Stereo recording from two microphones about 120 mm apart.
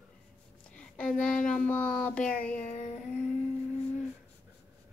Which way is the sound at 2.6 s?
65° left (ahead or behind).